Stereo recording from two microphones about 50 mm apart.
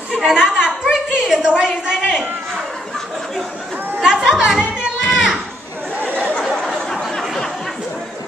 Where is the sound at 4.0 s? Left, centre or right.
Centre.